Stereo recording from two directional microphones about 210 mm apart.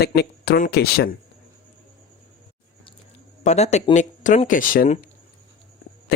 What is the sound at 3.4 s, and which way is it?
Speech, 30° left (ahead or behind).